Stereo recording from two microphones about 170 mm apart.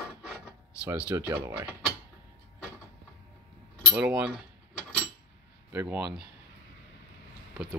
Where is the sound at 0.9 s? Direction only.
10° right (ahead or behind).